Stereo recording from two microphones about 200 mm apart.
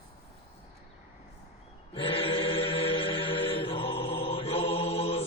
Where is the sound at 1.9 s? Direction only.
25° left (ahead or behind).